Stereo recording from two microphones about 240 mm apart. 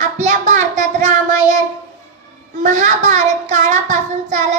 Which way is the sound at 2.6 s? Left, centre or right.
Right.